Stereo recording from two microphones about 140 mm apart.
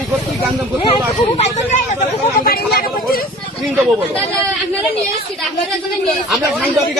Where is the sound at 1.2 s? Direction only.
50° left (ahead or behind); by 2.8 s 90° left.